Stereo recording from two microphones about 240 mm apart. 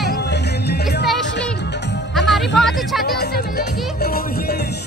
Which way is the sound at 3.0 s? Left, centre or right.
Left.